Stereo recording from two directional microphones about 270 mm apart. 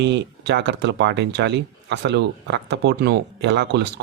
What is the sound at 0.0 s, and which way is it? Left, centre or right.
Speech, right.